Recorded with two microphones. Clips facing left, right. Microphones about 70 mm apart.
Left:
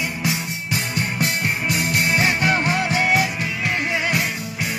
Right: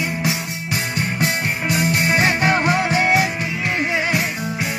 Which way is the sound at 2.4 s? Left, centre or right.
Right.